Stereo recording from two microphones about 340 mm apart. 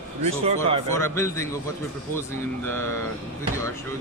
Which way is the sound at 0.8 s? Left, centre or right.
Centre.